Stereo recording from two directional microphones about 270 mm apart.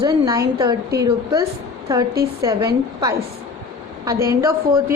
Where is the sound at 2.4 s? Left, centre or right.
Centre.